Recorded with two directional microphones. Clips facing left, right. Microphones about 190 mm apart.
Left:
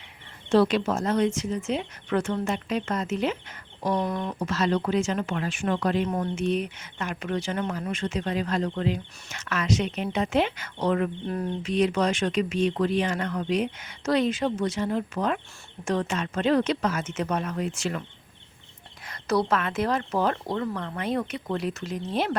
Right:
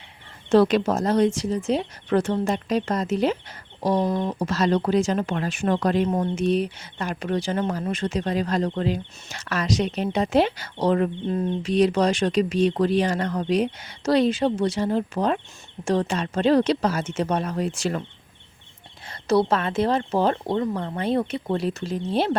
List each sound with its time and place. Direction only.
0.5 s speech: 45° right (ahead or behind)
3.9 s speech: 25° right (ahead or behind)
4.4 s speech: 35° right (ahead or behind)
6.1 s speech: 25° right (ahead or behind)
11.3 s speech: 20° right (ahead or behind)
11.6 s speech: 35° right (ahead or behind)
19.0 s speech: 30° right (ahead or behind)